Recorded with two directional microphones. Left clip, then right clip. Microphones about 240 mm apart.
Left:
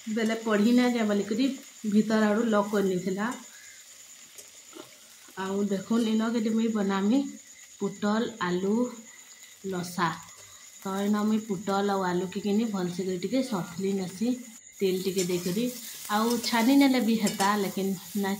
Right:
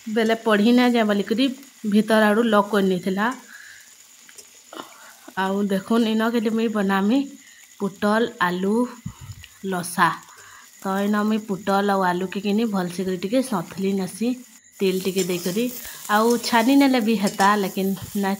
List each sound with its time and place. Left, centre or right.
0.1 s speech: right
5.3 s speech: right